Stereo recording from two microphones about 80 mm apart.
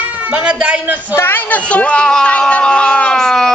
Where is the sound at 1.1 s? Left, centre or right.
Left.